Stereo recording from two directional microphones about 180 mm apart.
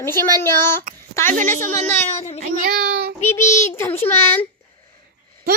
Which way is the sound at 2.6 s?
60° right (ahead or behind).